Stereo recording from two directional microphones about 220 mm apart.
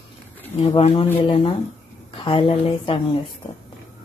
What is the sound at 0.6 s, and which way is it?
A woman's voice, 25° left (ahead or behind).